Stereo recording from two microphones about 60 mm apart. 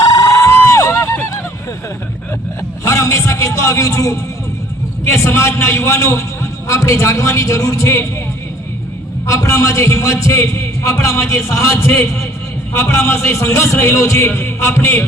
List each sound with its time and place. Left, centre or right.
0.0 s a sound: left
2.8 s a man's voice: left
5.0 s a man's voice: left
9.2 s a man's voice: left